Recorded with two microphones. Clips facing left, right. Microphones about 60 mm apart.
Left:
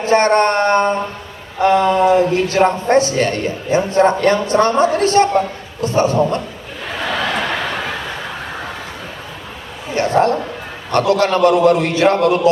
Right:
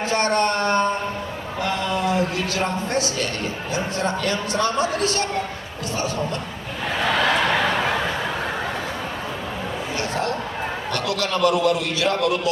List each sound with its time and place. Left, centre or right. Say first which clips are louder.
0.0 s a man's voice: left 8 dB; left
1.6 s mantra: left 11 dB; left
2.6 s a man's voice: left 10 dB; left
9.9 s a sound: left 12 dB; left
10.9 s a man's voice: left 12 dB; left